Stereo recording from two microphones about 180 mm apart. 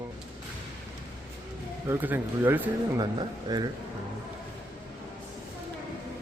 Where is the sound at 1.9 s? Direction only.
10° right (ahead or behind).